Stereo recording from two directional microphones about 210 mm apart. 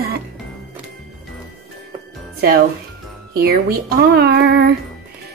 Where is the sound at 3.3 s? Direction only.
45° right (ahead or behind).